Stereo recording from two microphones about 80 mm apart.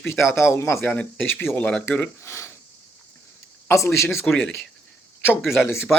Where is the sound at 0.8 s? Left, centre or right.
Centre.